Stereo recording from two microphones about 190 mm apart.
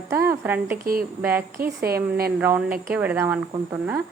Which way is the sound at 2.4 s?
10° right (ahead or behind).